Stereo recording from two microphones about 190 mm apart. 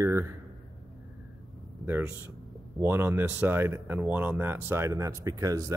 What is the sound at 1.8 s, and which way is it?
Speech, 10° right (ahead or behind).